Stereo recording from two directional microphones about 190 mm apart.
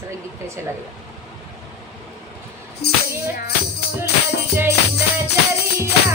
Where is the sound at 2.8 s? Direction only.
60° left (ahead or behind).